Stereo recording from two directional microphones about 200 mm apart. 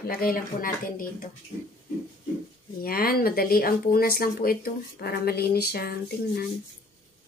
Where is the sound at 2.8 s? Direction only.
50° left (ahead or behind).